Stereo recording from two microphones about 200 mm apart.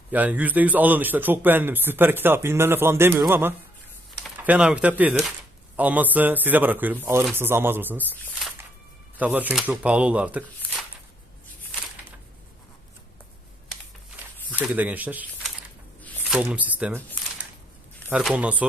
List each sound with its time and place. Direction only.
0.1 s a man's voice: 10° right (ahead or behind)
8.1 s speech: 10° left (ahead or behind)
9.1 s a man's voice: 5° right (ahead or behind)
14.5 s speech: 10° right (ahead or behind)
16.0 s a sound: 10° left (ahead or behind)
16.4 s a man's voice: 10° right (ahead or behind)
18.1 s a man's voice: 5° right (ahead or behind)